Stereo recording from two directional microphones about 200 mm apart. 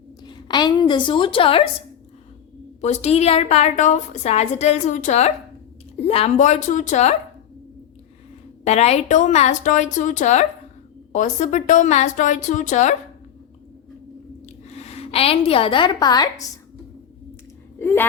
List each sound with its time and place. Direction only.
0.3 s a woman's voice: 20° left (ahead or behind)
2.8 s a woman's voice: 35° left (ahead or behind)
8.6 s a woman's voice: 35° left (ahead or behind)
14.4 s a woman's voice: 30° left (ahead or behind)
17.7 s a sound: 10° left (ahead or behind)